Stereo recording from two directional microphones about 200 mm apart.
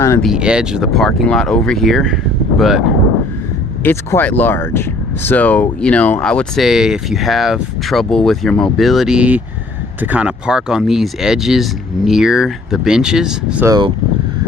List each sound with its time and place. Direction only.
0.0 s speech: 15° left (ahead or behind)
0.3 s speech: 5° right (ahead or behind)
3.8 s speech: 10° left (ahead or behind)
13.7 s speech: 20° right (ahead or behind)